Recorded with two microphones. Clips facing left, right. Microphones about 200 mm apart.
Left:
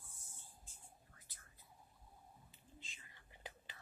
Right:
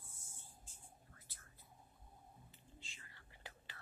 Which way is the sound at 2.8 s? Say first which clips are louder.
Left 1 dB; 20° left (ahead or behind).